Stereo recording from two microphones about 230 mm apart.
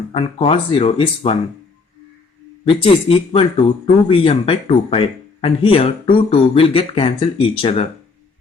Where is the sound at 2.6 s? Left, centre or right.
Left.